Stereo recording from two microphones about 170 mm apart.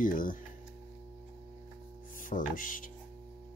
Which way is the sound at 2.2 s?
50° left (ahead or behind).